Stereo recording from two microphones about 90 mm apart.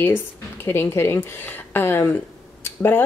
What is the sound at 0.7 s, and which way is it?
Speech, 25° left (ahead or behind).